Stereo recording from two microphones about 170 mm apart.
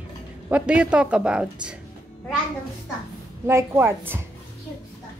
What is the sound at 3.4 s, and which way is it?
Speech, 15° right (ahead or behind).